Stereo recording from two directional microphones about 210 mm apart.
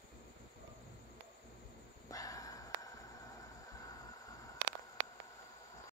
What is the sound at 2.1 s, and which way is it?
Dog, 15° left (ahead or behind).